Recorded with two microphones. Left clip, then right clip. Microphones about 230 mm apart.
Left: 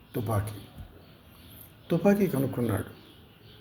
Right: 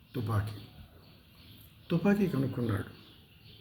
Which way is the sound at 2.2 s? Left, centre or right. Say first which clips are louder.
Left 5 dB; centre.